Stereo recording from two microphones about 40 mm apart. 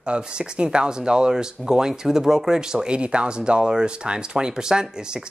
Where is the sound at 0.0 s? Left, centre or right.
Right.